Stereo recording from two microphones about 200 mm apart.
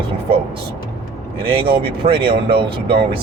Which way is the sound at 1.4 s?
25° right (ahead or behind).